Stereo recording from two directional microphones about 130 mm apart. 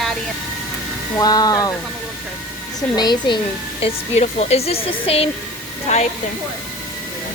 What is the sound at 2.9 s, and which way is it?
Speech, 35° left (ahead or behind).